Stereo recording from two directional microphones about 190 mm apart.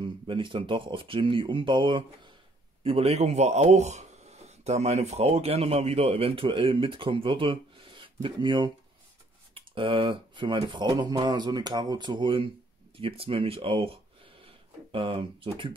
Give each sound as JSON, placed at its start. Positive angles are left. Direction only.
{"t": 0.0, "sound": "speech", "side_deg": -25}